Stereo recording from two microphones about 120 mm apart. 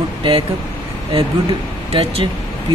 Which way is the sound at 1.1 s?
50° right (ahead or behind).